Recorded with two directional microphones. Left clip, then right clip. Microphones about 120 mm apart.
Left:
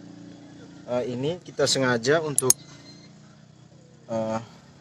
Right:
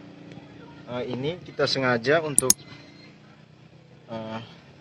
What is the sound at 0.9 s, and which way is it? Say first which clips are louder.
Speech: left 3 dB; 30° left (ahead or behind).